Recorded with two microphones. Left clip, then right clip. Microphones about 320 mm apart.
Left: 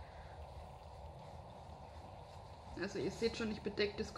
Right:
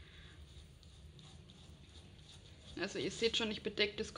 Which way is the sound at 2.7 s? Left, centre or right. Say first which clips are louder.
Right 2 dB; centre.